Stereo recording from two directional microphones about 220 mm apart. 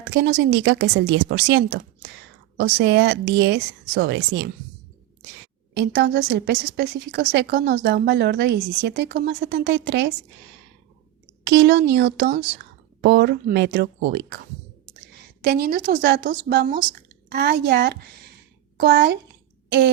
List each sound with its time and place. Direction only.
0.1 s a woman's voice: 50° right (ahead or behind)
5.7 s a woman's voice: 50° right (ahead or behind)
11.4 s a woman's voice: 50° right (ahead or behind)
15.4 s a woman's voice: 45° right (ahead or behind)